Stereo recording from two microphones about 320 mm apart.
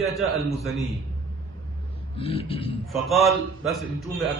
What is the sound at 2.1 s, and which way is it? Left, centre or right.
Speech, centre.